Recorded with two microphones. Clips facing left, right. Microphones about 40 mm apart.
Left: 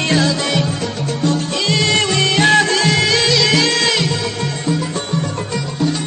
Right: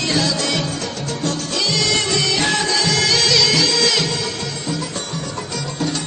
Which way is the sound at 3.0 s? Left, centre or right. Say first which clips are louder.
Left 2 dB; left.